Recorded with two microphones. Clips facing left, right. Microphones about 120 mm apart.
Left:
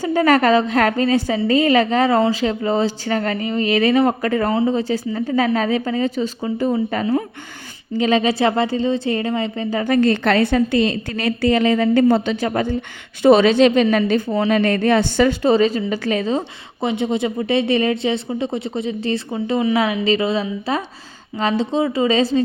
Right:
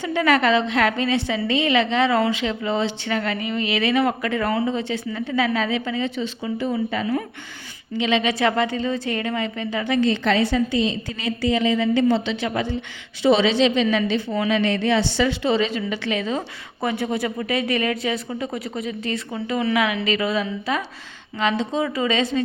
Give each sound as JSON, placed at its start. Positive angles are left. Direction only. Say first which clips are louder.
{"t": 0.0, "sound": "a woman's voice", "louder": "left 4 dB", "side_deg": 40}
{"t": 14.6, "sound": "a woman's voice", "louder": "left 4 dB", "side_deg": 50}
{"t": 16.8, "sound": "a woman's voice", "louder": "left 4 dB", "side_deg": 20}